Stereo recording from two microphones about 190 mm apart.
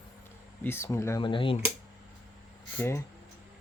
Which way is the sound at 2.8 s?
15° left (ahead or behind).